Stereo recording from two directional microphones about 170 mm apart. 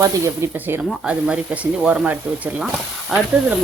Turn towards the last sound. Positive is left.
turn(degrees=-5)  # may be behind; listen again after turning